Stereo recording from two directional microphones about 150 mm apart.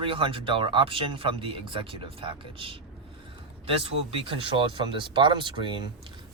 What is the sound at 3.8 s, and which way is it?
Speech, 40° right (ahead or behind).